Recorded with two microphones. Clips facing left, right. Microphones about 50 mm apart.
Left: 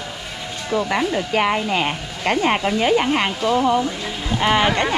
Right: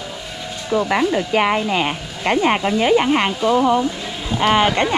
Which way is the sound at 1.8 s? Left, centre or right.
Right.